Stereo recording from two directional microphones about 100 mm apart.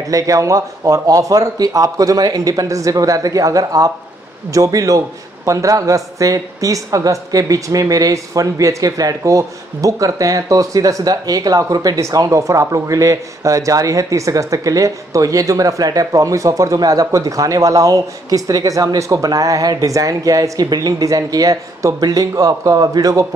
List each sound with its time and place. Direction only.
0.1 s a man's voice: 35° right (ahead or behind)